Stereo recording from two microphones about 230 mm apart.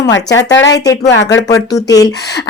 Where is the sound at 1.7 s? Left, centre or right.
Centre.